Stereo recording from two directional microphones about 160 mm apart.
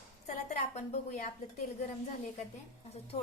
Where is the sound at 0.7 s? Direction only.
45° left (ahead or behind).